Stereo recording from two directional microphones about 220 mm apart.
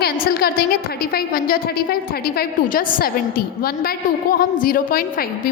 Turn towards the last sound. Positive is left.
turn(degrees=40)  # may be behind; listen again after turning